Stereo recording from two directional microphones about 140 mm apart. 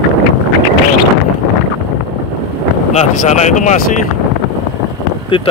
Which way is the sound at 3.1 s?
60° left (ahead or behind).